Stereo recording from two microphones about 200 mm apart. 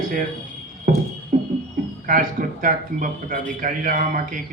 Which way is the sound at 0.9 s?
45° right (ahead or behind).